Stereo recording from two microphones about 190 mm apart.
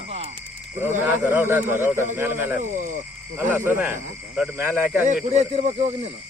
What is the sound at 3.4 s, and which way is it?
Speech, 10° right (ahead or behind).